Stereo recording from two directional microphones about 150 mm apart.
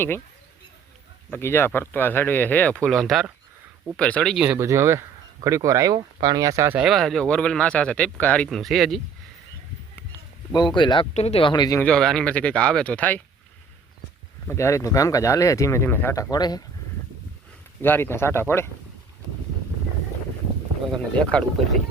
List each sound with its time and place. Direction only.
1.3 s speech: 15° left (ahead or behind)
4.4 s speech: 20° right (ahead or behind)
6.7 s speech: centre (ahead or behind)
10.5 s speech: 30° left (ahead or behind)
11.1 s speech: 45° left (ahead or behind)
11.8 s speech: 5° left (ahead or behind)
14.4 s speech: 20° left (ahead or behind)
16.3 s speech: 25° left (ahead or behind)
17.8 s speech: 15° left (ahead or behind)
21.2 s speech: 5° left (ahead or behind)